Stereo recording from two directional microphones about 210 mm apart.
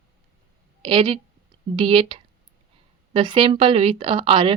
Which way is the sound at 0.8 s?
25° right (ahead or behind).